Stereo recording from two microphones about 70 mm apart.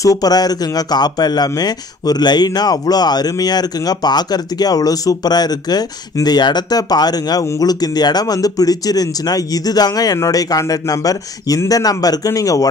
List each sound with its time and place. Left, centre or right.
0.0 s speech: left
6.2 s speech: left